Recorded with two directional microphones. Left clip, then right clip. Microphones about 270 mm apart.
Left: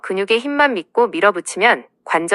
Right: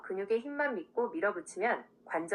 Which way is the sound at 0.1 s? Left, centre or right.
Left.